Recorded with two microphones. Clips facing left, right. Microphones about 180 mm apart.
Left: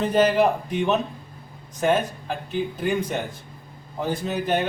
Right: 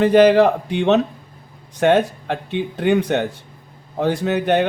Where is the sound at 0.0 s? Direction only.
75° right (ahead or behind).